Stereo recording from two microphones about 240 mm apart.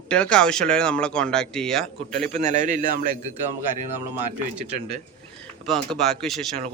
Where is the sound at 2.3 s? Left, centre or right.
Right.